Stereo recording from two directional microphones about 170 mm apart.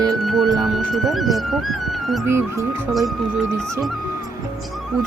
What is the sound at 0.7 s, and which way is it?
Speech, centre (ahead or behind).